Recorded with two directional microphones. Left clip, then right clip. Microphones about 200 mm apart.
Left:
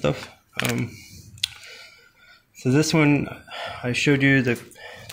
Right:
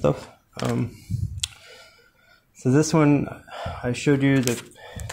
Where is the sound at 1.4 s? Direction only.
10° right (ahead or behind).